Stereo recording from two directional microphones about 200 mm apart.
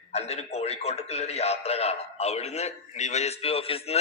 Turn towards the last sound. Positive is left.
turn(degrees=30)  # may be behind; listen again after turning